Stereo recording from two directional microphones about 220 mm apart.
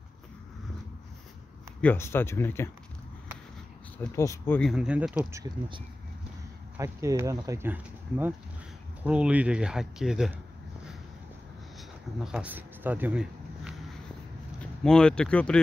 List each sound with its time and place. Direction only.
1.8 s speech: 10° left (ahead or behind)
4.0 s speech: 15° left (ahead or behind); by 5.4 s 5° right (ahead or behind)
6.8 s speech: 15° right (ahead or behind)
12.2 s speech: 5° right (ahead or behind)